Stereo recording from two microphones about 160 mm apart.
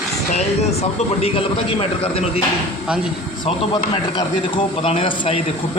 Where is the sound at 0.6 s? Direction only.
40° left (ahead or behind).